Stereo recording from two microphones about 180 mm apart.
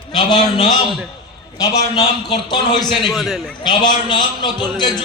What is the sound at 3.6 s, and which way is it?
A man's voice, 25° left (ahead or behind).